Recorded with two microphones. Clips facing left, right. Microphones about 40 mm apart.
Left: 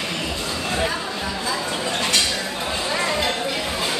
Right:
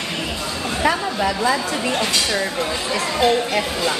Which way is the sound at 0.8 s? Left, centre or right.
Right.